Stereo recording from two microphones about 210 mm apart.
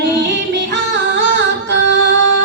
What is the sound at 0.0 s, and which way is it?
Music, 55° right (ahead or behind).